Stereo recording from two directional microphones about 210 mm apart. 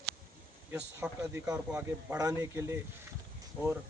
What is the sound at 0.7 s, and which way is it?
Speech, 10° right (ahead or behind).